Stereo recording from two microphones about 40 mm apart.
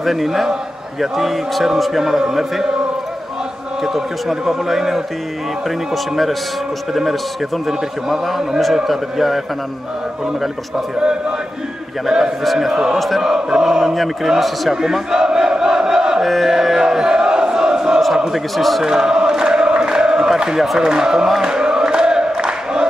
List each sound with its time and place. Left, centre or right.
0.0 s a man's voice: centre
3.8 s speech: centre
6.9 s a man's voice: centre
11.0 s a man's voice: centre
12.7 s speech: centre
14.4 s a man's voice: centre
14.8 s battle cry: centre
16.3 s a man's voice: centre
16.5 s a sound: centre
18.6 s a man's voice: centre
18.9 s chant: centre
20.8 s speech: centre
21.3 s a sound: centre